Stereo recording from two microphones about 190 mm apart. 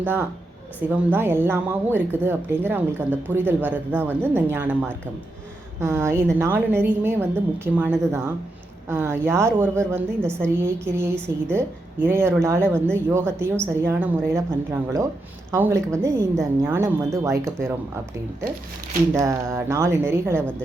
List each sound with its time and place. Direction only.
0.0 s speech: 10° right (ahead or behind)
10.2 s a woman's voice: 5° left (ahead or behind)
10.6 s speech: 15° right (ahead or behind)
14.3 s speech: 15° right (ahead or behind)
19.1 s speech: 15° right (ahead or behind)